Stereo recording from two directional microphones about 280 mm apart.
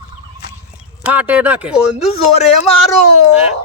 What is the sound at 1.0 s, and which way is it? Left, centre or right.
Speech, centre.